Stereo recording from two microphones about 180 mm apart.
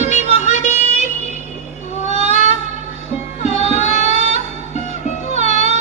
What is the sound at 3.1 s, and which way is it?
Music, 35° left (ahead or behind).